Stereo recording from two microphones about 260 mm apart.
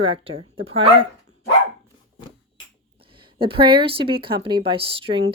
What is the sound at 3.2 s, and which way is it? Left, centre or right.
Speech, centre.